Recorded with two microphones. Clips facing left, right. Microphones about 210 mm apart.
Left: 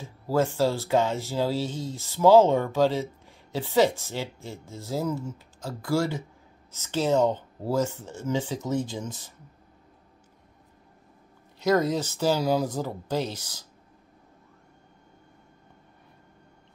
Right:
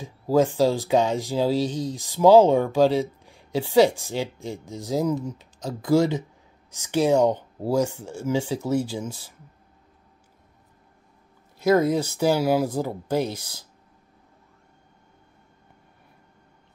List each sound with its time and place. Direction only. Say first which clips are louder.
0.0 s speech: right 5 dB; 15° right (ahead or behind)
11.6 s speech: right 4 dB; 10° right (ahead or behind)